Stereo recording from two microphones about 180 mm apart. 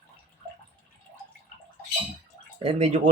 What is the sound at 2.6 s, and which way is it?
Speech, 40° right (ahead or behind).